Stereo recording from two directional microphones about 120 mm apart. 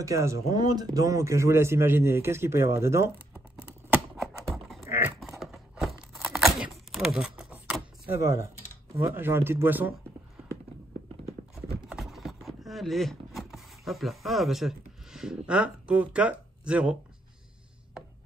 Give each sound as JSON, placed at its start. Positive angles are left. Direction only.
{"t": 0.0, "sound": "speech", "side_deg": -25}
{"t": 3.6, "sound": "typing", "side_deg": -5}
{"t": 4.8, "sound": "typing", "side_deg": -20}
{"t": 5.4, "sound": "a sound", "side_deg": 0}
{"t": 8.1, "sound": "speech", "side_deg": -25}
{"t": 11.9, "sound": "vehicle", "side_deg": 0}